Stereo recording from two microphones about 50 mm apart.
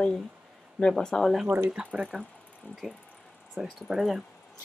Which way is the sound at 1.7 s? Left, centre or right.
Right.